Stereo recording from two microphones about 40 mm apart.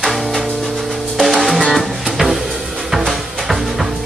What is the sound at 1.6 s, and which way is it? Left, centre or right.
Music, centre.